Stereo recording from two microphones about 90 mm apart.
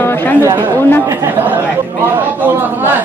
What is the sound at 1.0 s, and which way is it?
A man's voice, 30° right (ahead or behind).